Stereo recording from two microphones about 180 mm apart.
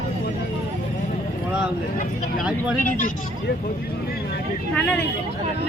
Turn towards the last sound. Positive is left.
turn(degrees=5)  # may be behind; listen again after turning